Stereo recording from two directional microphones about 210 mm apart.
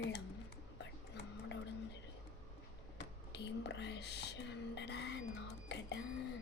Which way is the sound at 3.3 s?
55° left (ahead or behind).